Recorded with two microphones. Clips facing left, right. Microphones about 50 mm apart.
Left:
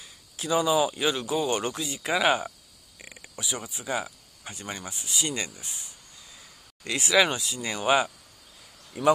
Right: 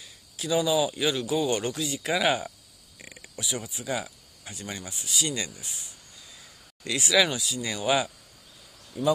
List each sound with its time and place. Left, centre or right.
0.4 s speech: centre
3.0 s a sound: centre
3.5 s speech: left
9.0 s speech: left